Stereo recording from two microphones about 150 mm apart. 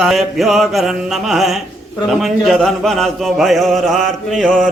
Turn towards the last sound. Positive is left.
turn(degrees=0)  # may be behind; listen again after turning